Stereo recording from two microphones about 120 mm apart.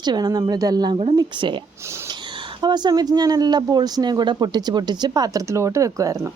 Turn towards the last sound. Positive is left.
turn(degrees=-25)  # may be behind; listen again after turning